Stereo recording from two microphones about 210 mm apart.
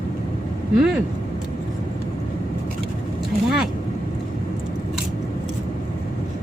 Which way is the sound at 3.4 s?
5° right (ahead or behind).